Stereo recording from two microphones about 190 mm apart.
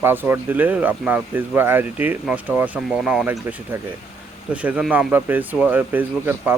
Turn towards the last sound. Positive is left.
turn(degrees=-10)  # may be behind; listen again after turning